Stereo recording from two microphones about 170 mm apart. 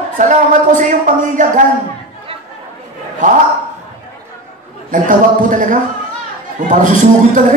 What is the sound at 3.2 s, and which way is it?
Speech, 50° right (ahead or behind).